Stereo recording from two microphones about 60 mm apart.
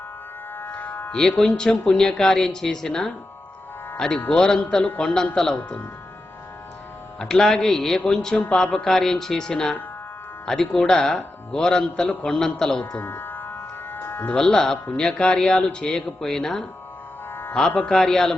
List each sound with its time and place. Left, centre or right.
0.5 s music: left
1.1 s speech: centre
4.5 s music: left
7.2 s speech: centre
8.4 s speech: centre
13.0 s music: left
14.3 s speech: centre